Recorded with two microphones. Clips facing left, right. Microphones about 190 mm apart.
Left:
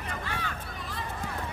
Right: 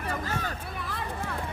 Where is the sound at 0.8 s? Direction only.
60° right (ahead or behind).